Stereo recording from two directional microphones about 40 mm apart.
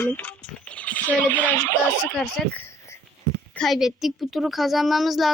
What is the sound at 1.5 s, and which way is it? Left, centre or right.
Speech, left.